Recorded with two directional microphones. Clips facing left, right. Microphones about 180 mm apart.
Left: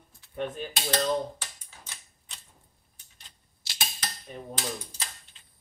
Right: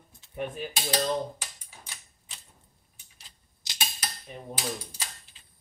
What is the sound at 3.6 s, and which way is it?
Cutlery, 20° right (ahead or behind).